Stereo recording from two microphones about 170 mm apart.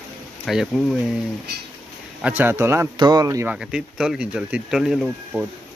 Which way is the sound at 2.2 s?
10° right (ahead or behind).